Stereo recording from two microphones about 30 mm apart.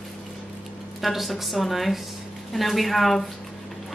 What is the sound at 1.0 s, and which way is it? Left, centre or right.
Speech, centre.